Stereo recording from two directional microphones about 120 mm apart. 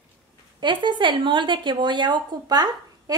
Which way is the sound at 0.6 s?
40° right (ahead or behind).